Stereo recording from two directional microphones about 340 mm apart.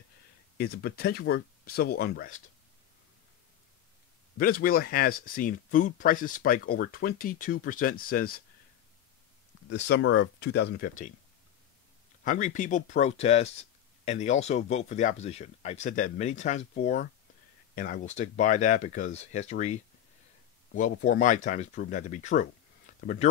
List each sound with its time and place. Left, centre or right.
0.6 s speech: left
4.4 s speech: left
9.7 s speech: left
12.3 s speech: left